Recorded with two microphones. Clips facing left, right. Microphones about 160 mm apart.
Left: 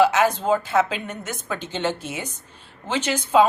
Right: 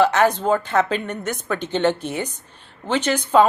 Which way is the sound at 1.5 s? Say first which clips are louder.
Right 7 dB; 60° right (ahead or behind).